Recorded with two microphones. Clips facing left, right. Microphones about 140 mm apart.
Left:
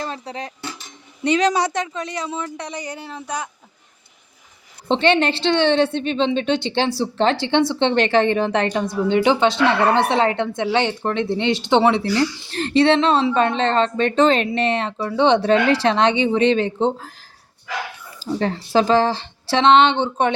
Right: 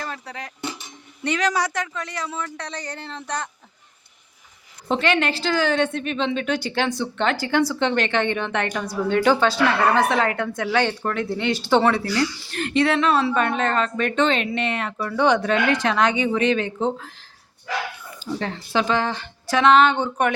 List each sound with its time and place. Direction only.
0.0 s a sound: 25° left (ahead or behind)
0.6 s dishes: 20° right (ahead or behind)
1.2 s a woman's voice: 20° left (ahead or behind)
4.9 s a woman's voice: 30° left (ahead or behind)
18.2 s a woman's voice: 35° left (ahead or behind)